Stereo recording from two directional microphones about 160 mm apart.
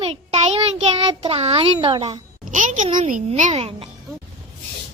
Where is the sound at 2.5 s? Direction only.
50° right (ahead or behind).